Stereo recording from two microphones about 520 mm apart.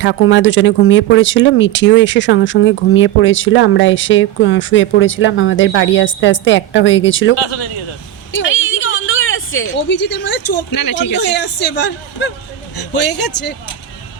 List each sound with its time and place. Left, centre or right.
0.0 s speech: left
7.4 s speech: left
8.3 s a sound: left
10.7 s speech: left
11.1 s speech: centre